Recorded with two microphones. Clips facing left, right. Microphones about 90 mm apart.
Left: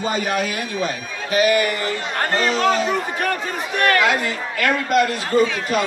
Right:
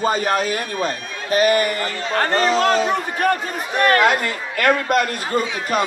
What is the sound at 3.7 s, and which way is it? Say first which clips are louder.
A man's voice: right 2 dB; 35° right (ahead or behind).